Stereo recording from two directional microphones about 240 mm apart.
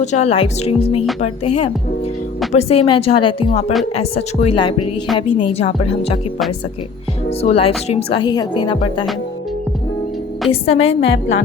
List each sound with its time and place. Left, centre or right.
0.0 s speech: left
2.5 s speech: left
7.3 s speech: left
10.5 s speech: left
11.0 s a woman's voice: left